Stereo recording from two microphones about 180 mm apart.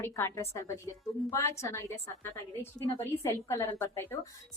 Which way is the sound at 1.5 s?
15° left (ahead or behind).